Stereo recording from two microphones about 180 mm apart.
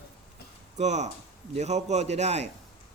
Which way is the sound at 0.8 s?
40° right (ahead or behind).